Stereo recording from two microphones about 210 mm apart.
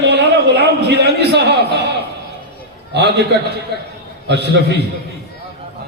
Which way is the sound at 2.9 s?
50° right (ahead or behind).